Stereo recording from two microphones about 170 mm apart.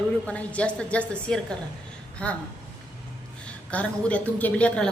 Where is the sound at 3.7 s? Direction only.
10° left (ahead or behind).